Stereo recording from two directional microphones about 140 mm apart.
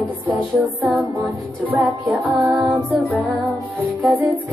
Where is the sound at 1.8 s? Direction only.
Centre (ahead or behind).